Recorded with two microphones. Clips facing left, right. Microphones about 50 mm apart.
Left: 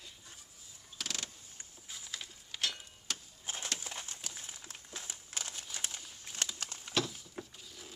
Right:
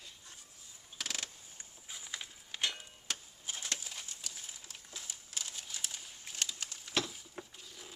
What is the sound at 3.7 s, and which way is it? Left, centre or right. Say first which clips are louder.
Horse: left 3 dB; left.